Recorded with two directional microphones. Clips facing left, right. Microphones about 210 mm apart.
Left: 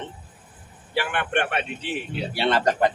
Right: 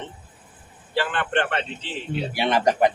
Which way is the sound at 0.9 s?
10° left (ahead or behind).